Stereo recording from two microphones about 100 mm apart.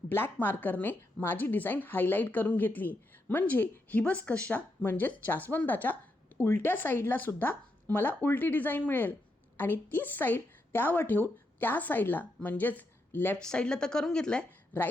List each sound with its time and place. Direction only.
0.1 s a woman's voice: 20° left (ahead or behind)
13.4 s a woman's voice: 10° left (ahead or behind)